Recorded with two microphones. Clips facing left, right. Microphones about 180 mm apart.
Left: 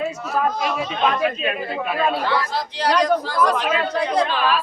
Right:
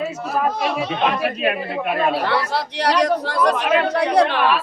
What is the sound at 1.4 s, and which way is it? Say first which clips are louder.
A woman's voice: right 3 dB; 65° right (ahead or behind).